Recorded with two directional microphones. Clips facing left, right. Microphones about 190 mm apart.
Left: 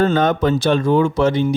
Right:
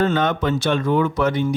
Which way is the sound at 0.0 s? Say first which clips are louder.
Left 4 dB; 40° left (ahead or behind).